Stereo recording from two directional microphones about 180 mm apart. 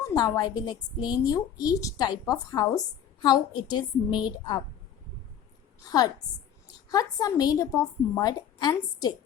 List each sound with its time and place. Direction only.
0.1 s a woman's voice: 20° left (ahead or behind)
6.9 s a woman's voice: 20° left (ahead or behind)